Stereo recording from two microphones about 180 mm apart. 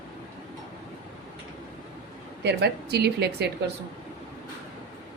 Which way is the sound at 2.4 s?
65° right (ahead or behind).